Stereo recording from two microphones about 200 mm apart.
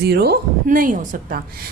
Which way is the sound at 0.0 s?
55° right (ahead or behind).